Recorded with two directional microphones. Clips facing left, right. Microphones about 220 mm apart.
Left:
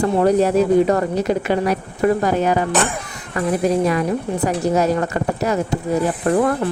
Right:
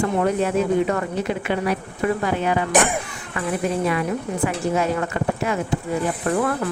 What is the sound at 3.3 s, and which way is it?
A woman's voice, 40° left (ahead or behind).